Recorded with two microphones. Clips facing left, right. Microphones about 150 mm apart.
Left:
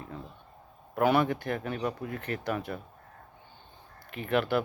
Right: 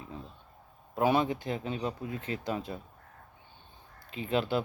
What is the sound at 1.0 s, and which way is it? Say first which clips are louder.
Speech: left 2 dB; 20° right (ahead or behind).